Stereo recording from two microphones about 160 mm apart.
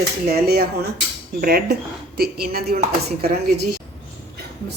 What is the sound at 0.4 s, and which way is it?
Speech, 75° right (ahead or behind).